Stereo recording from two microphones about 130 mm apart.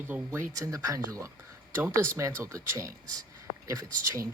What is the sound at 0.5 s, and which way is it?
Speech, 25° right (ahead or behind).